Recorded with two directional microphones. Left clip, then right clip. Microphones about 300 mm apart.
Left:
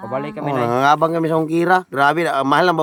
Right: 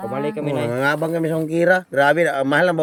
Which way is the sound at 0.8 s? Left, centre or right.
Left.